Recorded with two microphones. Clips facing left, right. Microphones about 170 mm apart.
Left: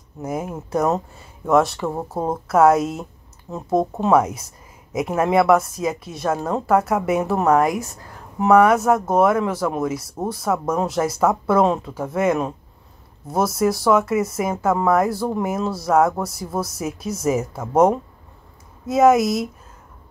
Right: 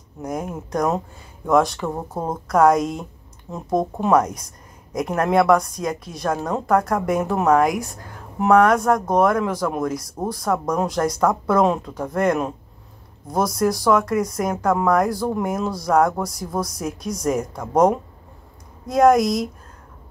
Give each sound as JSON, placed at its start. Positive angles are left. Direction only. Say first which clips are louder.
{"t": 0.2, "sound": "speech", "louder": "left 1 dB", "side_deg": 5}